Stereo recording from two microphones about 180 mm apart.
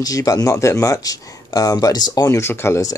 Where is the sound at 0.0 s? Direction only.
20° left (ahead or behind).